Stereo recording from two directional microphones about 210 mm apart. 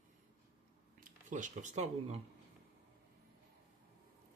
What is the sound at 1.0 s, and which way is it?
Speech, 35° right (ahead or behind).